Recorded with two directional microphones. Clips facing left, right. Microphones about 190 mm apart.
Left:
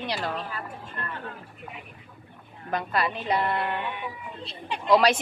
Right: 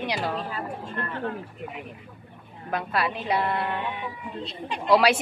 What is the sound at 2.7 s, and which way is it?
Speech, 5° right (ahead or behind).